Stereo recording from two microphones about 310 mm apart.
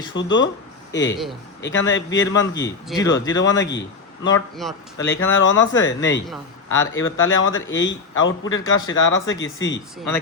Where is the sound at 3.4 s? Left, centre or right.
Left.